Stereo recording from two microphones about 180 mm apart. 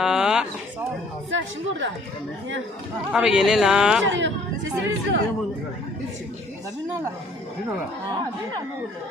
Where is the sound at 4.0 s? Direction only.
90° right.